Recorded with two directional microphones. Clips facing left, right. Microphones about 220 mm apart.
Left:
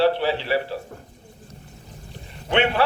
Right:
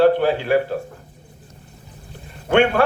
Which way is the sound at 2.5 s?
50° right (ahead or behind).